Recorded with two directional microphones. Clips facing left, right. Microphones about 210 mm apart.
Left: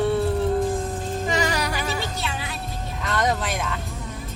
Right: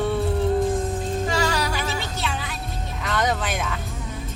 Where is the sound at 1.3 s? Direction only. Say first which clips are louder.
Left 2 dB; 15° left (ahead or behind).